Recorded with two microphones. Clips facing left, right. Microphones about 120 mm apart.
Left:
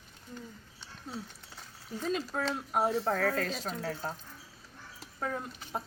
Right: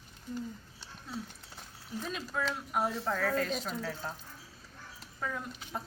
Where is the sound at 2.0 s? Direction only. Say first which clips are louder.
Left 4 dB; 35° left (ahead or behind).